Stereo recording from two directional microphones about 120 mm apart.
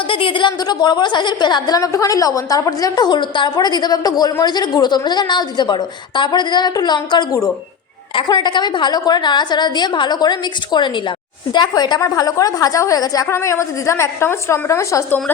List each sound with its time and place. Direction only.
0.1 s a woman's voice: 45° left (ahead or behind); by 15.2 s 25° left (ahead or behind)